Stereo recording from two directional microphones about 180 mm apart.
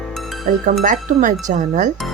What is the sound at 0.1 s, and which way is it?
Music, centre (ahead or behind).